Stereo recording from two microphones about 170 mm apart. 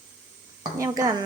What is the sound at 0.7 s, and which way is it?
Speech, 20° right (ahead or behind).